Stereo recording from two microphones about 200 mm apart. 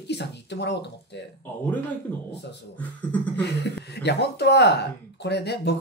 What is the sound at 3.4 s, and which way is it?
Speech, 55° left (ahead or behind).